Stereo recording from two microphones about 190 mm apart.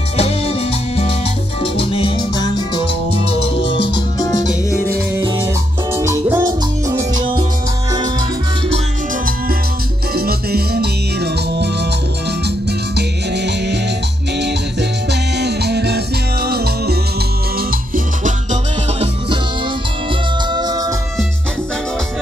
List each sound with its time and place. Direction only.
0.2 s music: 30° left (ahead or behind)
3.9 s music: 20° left (ahead or behind)
5.9 s music: 15° right (ahead or behind)
10.1 s music: 55° right (ahead or behind)
12.4 s music: 60° right (ahead or behind); by 19.0 s 40° right (ahead or behind)
20.5 s music: 20° right (ahead or behind)